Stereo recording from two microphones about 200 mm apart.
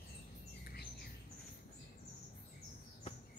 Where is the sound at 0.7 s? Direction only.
50° left (ahead or behind).